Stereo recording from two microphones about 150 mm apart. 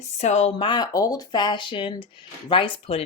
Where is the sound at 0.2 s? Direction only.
45° left (ahead or behind).